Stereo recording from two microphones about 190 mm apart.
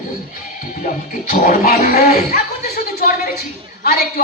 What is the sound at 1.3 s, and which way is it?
Speech, 45° left (ahead or behind).